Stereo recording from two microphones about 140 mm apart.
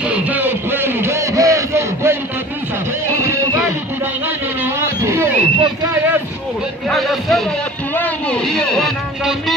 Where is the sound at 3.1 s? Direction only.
20° right (ahead or behind).